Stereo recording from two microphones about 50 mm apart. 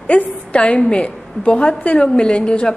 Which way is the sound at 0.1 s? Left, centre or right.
Left.